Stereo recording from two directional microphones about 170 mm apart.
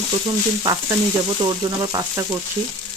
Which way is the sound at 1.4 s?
25° right (ahead or behind).